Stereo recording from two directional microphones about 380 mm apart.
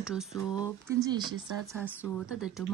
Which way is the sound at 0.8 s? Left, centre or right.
Centre.